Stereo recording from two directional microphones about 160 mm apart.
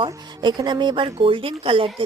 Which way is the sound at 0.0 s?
30° right (ahead or behind).